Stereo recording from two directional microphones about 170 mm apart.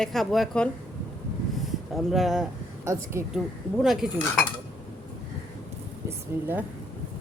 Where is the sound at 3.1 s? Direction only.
15° right (ahead or behind).